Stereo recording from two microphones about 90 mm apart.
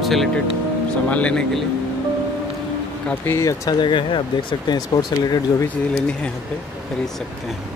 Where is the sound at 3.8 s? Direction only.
65° left (ahead or behind).